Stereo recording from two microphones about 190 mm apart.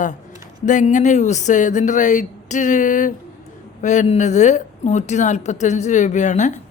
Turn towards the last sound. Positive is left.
turn(degrees=40)  # may be behind; listen again after turning